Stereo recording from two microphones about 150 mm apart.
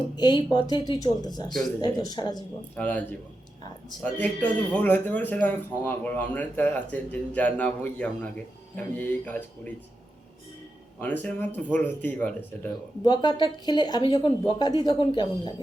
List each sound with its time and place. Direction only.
0.2 s speech: 30° left (ahead or behind)
2.7 s speech: 10° left (ahead or behind)
4.0 s speech: 10° left (ahead or behind)
11.0 s speech: 10° left (ahead or behind)
13.1 s speech: 30° left (ahead or behind)